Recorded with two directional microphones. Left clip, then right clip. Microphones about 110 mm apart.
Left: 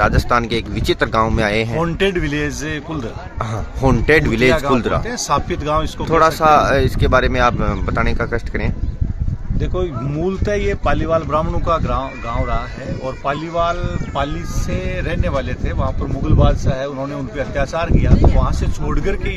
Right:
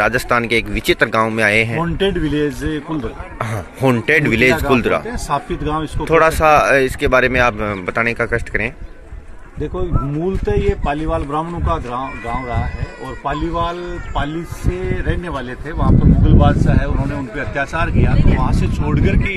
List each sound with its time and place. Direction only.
0.0 s speech: centre (ahead or behind)
1.8 s speech: 35° left (ahead or behind)
3.3 s speech: 15° left (ahead or behind)
5.1 s speech: 40° left (ahead or behind)
6.0 s speech: 10° left (ahead or behind)
10.4 s speech: 30° left (ahead or behind)
13.3 s a man's voice: 30° left (ahead or behind)